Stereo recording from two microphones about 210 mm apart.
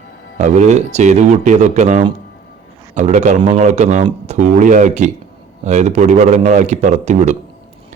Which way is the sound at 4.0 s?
20° right (ahead or behind).